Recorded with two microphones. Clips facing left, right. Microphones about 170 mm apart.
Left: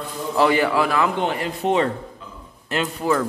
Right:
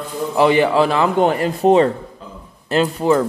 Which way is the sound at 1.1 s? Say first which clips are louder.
Right 7 dB; 45° right (ahead or behind).